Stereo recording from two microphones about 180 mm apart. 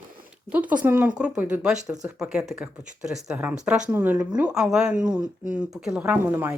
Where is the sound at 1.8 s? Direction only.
20° right (ahead or behind).